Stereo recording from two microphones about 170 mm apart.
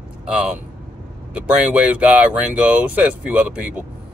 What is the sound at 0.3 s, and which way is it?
Speech, 5° right (ahead or behind).